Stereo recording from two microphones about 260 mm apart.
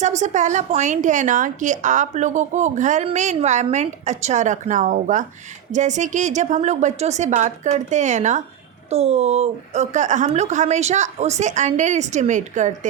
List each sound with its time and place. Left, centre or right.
0.0 s a woman's voice: right